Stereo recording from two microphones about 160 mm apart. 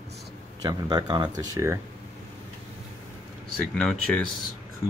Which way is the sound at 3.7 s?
5° left (ahead or behind).